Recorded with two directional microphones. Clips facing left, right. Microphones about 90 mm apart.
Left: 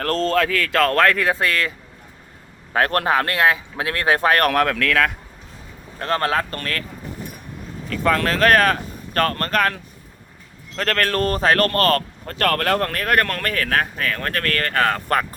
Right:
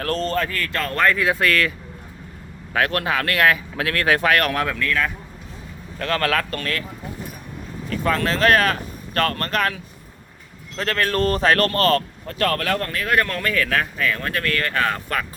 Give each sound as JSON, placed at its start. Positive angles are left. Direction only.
{"t": 0.3, "sound": "speech", "side_deg": 90}
{"t": 1.4, "sound": "speech", "side_deg": 25}
{"t": 2.7, "sound": "speech", "side_deg": 40}
{"t": 3.3, "sound": "speech", "side_deg": 20}
{"t": 4.4, "sound": "speech", "side_deg": 60}
{"t": 6.0, "sound": "speech", "side_deg": 30}
{"t": 8.0, "sound": "speech", "side_deg": 50}
{"t": 10.8, "sound": "speech", "side_deg": 55}